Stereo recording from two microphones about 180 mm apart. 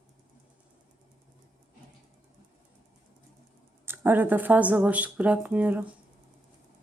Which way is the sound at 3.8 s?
10° right (ahead or behind).